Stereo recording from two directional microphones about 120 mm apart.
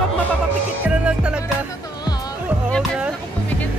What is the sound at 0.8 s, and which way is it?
Music, 10° right (ahead or behind).